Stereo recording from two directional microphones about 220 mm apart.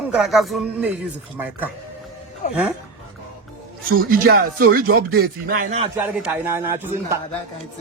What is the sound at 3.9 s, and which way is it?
Speech, 40° right (ahead or behind).